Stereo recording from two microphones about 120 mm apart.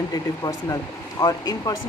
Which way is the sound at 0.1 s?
30° left (ahead or behind).